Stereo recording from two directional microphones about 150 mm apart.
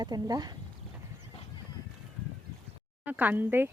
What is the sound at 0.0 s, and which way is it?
Speech, 25° right (ahead or behind).